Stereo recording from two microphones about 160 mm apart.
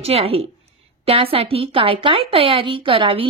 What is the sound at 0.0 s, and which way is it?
Speech, 40° right (ahead or behind).